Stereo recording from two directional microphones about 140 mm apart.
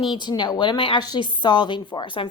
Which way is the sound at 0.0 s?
35° left (ahead or behind).